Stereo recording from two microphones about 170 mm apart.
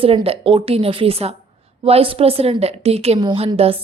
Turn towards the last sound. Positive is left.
turn(degrees=-35)  # may be behind; listen again after turning